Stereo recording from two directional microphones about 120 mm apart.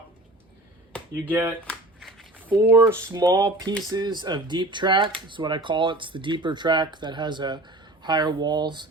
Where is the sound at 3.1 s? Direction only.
30° right (ahead or behind).